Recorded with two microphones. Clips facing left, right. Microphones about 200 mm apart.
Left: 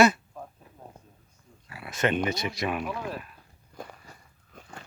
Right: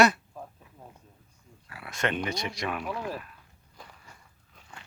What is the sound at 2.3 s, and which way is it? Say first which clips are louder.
Speech: left 3 dB; 5° left (ahead or behind).